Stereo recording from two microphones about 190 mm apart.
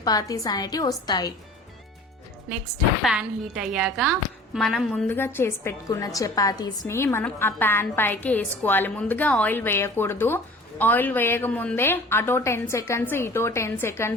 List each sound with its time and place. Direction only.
0.0 s a woman's voice: 20° left (ahead or behind)
3.0 s a woman's voice: 5° right (ahead or behind); by 14.2 s 15° left (ahead or behind)